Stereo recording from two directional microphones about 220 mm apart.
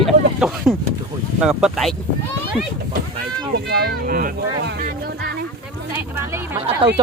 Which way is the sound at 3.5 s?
45° right (ahead or behind).